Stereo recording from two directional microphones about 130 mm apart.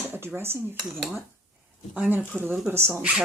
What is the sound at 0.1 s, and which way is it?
Speech, 15° right (ahead or behind).